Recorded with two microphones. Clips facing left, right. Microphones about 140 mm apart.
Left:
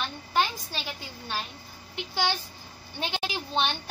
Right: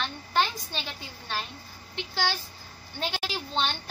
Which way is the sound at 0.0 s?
5° left (ahead or behind).